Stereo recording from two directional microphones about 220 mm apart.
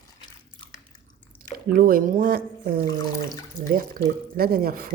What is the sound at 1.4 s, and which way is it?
Speech, 40° right (ahead or behind).